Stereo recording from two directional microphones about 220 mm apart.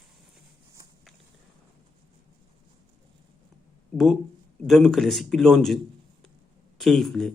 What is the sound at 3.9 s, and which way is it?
A man's voice, centre (ahead or behind).